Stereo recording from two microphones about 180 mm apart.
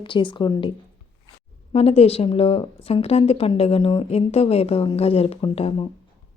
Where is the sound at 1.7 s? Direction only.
35° left (ahead or behind).